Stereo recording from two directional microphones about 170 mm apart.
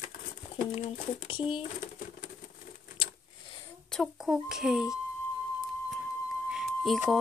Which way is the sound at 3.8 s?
5° left (ahead or behind).